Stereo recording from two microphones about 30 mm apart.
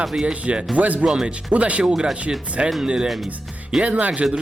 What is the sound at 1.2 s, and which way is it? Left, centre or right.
Speech, right.